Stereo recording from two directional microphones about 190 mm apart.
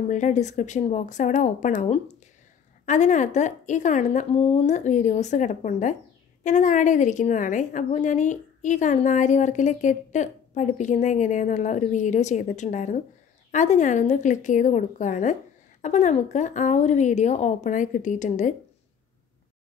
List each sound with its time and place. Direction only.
0.1 s a woman's voice: 40° left (ahead or behind)